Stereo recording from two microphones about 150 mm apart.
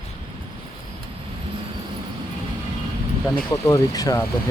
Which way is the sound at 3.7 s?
25° left (ahead or behind).